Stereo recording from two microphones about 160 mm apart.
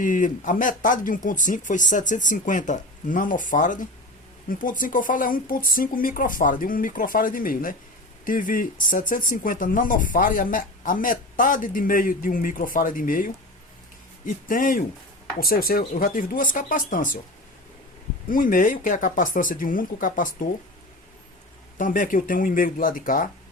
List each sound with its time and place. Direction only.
0.0 s speech: 55° left (ahead or behind)
18.3 s speech: 60° left (ahead or behind)
21.8 s speech: 55° left (ahead or behind)